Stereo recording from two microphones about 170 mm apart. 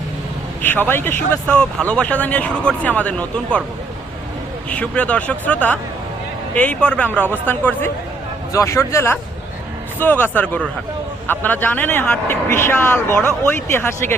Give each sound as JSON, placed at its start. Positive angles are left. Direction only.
{"t": 0.6, "sound": "speech", "side_deg": 10}
{"t": 4.7, "sound": "speech", "side_deg": 10}